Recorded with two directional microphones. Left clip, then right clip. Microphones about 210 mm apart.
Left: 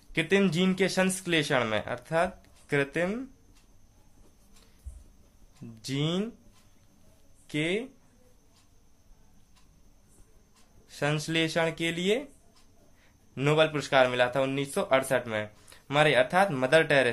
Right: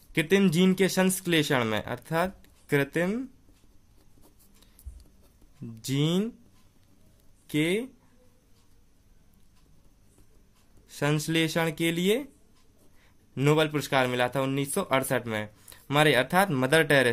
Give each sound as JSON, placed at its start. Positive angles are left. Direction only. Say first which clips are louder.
{"t": 0.1, "sound": "a man's voice", "louder": "right 1 dB", "side_deg": -35}
{"t": 5.8, "sound": "a man's voice", "louder": "right 3 dB", "side_deg": -35}
{"t": 7.4, "sound": "speech", "louder": "right 3 dB", "side_deg": -35}
{"t": 10.9, "sound": "a man's voice", "louder": "right 1 dB", "side_deg": -35}
{"t": 13.3, "sound": "a man's voice", "louder": "even", "side_deg": -35}